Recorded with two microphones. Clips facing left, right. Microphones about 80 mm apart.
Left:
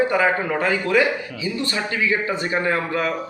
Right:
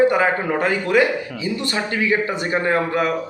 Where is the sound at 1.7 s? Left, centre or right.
Right.